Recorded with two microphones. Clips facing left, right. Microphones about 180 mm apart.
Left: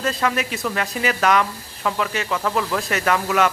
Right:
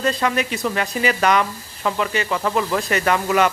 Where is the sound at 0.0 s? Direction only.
Centre (ahead or behind).